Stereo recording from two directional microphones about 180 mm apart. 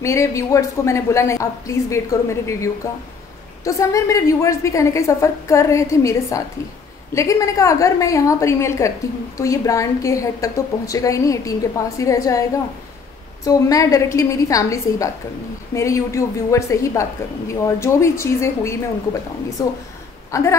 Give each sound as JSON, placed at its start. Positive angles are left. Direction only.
{"t": 0.0, "sound": "a woman's voice", "side_deg": 15}